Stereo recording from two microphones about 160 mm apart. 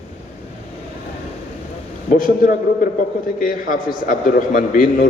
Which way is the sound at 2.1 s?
60° left (ahead or behind).